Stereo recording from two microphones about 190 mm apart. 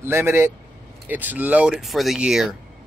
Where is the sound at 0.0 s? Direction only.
10° right (ahead or behind).